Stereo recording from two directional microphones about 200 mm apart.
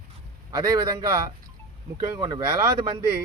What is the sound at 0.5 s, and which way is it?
Speech, 20° right (ahead or behind).